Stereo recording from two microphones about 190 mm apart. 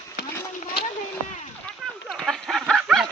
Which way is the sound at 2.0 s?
Centre (ahead or behind).